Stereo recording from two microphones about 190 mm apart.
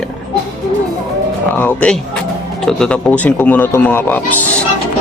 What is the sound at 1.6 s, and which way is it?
Speech, 10° left (ahead or behind).